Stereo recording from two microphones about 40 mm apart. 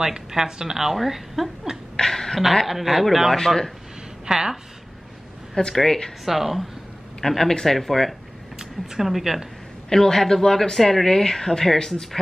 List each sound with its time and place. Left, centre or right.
0.0 s a woman's voice: centre
2.0 s a sound: centre
2.6 s speech: centre
3.3 s speech: centre
4.3 s a woman's voice: centre
5.6 s speech: left
6.2 s speech: centre
7.2 s speech: centre
8.5 s a woman's voice: centre
9.8 s speech: centre